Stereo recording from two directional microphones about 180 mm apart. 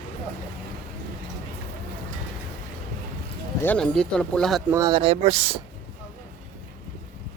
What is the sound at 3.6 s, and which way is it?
Speech, 5° left (ahead or behind).